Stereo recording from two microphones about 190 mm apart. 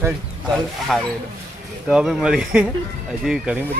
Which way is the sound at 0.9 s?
Centre (ahead or behind).